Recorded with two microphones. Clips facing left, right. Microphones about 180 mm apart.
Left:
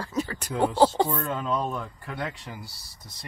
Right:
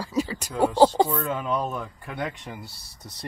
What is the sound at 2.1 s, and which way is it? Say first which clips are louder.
Speech: right 2 dB; 20° right (ahead or behind).